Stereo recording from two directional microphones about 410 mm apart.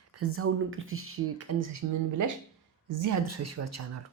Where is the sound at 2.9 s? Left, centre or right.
Right.